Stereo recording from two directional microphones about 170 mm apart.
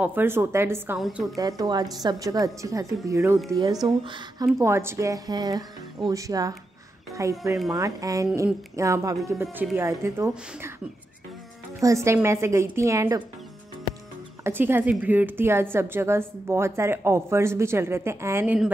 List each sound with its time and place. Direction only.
0.0 s a woman's voice: 10° right (ahead or behind)
0.9 s a woman's voice: centre (ahead or behind)
1.3 s a woman's voice: 20° right (ahead or behind)
11.8 s a woman's voice: 15° right (ahead or behind)
14.4 s a woman's voice: 15° right (ahead or behind)